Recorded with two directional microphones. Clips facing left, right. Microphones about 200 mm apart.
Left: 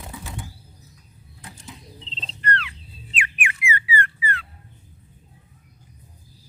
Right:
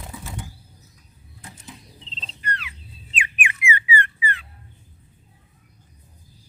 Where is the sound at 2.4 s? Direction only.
10° right (ahead or behind).